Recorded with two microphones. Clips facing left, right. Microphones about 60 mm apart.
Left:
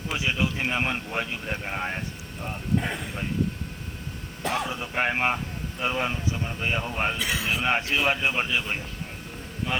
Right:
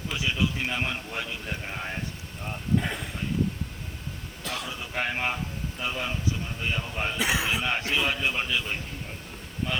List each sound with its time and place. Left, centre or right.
0.1 s speech: left
2.4 s speech: centre
4.4 s speech: left
7.2 s speech: right
7.6 s speech: left